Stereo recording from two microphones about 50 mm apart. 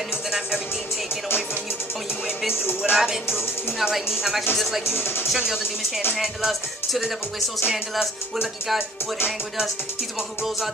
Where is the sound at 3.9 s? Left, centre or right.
Centre.